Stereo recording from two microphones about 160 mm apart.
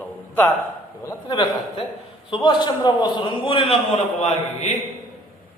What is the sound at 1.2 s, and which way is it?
A man's voice, 30° left (ahead or behind).